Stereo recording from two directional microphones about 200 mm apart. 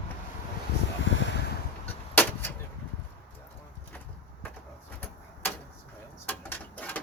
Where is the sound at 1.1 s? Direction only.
70° left (ahead or behind).